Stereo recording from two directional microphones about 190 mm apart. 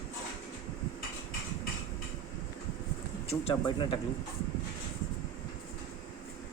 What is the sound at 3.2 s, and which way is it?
Speech, 30° left (ahead or behind).